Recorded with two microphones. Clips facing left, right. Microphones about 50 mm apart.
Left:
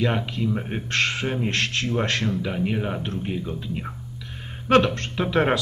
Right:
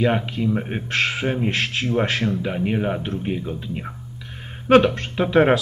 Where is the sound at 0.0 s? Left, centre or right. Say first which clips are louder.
Right 4 dB; centre.